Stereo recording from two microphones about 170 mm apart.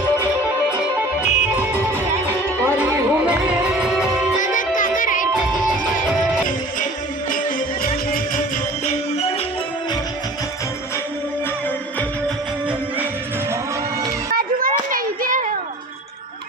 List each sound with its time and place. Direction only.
0.8 s music: 10° right (ahead or behind)
2.6 s music: 15° right (ahead or behind)
4.5 s music: 50° left (ahead or behind)
7.3 s music: 50° left (ahead or behind)
14.3 s a sound: 55° right (ahead or behind)